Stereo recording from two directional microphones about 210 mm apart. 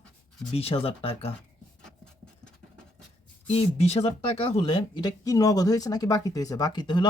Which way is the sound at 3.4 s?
30° left (ahead or behind).